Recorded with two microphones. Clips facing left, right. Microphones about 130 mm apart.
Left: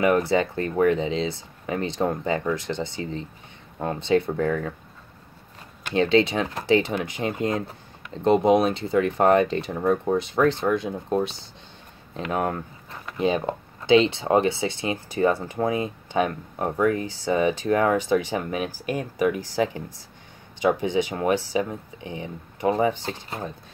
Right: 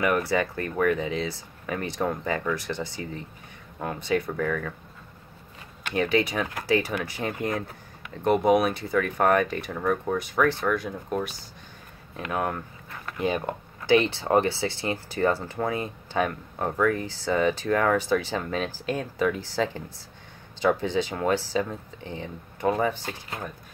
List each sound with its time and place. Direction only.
0.0 s speech: 25° left (ahead or behind)
5.9 s speech: 25° left (ahead or behind)
12.1 s a sound: 25° left (ahead or behind)
13.0 s speech: 20° left (ahead or behind)